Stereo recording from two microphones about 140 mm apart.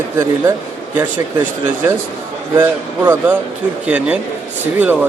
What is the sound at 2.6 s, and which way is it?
A man's voice, 15° right (ahead or behind).